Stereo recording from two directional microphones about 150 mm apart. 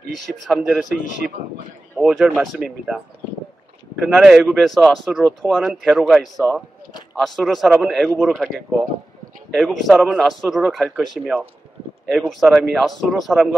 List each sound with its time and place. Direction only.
0.5 s speech: 5° right (ahead or behind)
2.0 s speech: 5° right (ahead or behind)
4.0 s speech: 5° right (ahead or behind)